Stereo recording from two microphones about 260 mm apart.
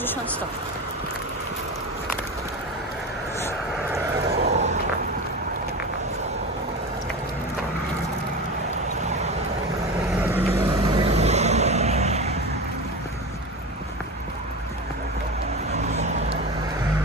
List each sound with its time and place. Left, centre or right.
4.4 s vehicle: right
10.2 s vehicle: centre
10.6 s vehicle: right
15.7 s vehicle: right